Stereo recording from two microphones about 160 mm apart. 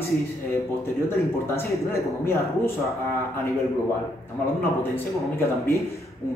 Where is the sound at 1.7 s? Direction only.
15° left (ahead or behind).